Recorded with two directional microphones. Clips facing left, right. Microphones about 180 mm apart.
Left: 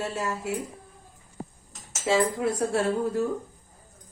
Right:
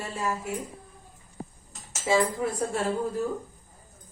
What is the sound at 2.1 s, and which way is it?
Speech, 70° left (ahead or behind).